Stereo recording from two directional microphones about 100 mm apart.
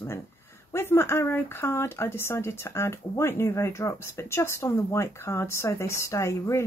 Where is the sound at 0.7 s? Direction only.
25° left (ahead or behind).